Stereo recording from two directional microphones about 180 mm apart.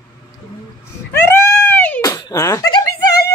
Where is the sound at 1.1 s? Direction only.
15° left (ahead or behind).